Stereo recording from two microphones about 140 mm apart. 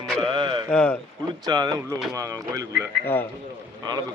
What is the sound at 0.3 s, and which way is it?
Mantra, 35° right (ahead or behind).